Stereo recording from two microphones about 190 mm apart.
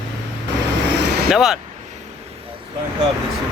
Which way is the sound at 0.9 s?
60° right (ahead or behind).